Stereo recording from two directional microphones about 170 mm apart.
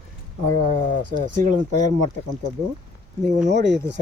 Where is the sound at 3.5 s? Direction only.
90° right.